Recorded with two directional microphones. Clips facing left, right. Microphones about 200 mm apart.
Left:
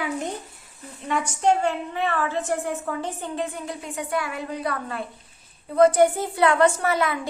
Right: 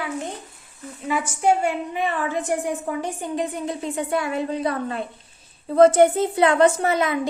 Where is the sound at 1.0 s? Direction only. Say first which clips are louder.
Right 1 dB; 5° right (ahead or behind).